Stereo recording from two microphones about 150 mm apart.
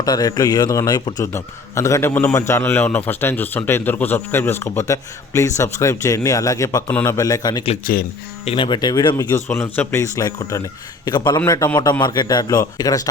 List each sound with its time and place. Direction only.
0.0 s a man's voice: 25° left (ahead or behind)
7.9 s speech: 70° left (ahead or behind)
8.4 s a man's voice: 35° left (ahead or behind)